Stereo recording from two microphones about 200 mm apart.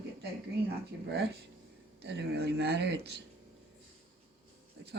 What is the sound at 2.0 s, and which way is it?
Speech, 55° right (ahead or behind).